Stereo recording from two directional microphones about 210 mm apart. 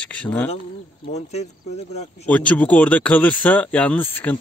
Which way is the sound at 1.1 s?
30° left (ahead or behind).